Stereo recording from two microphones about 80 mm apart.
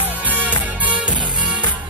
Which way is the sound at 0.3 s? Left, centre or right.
Centre.